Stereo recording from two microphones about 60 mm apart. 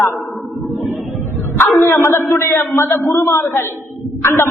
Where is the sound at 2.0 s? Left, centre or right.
Left.